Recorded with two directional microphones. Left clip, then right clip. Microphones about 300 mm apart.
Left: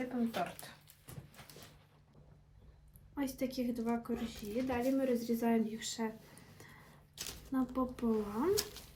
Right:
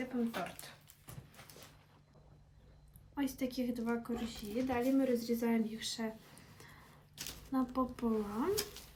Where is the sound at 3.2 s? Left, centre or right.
Centre.